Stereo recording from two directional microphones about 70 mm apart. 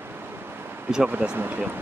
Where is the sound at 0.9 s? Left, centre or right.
Centre.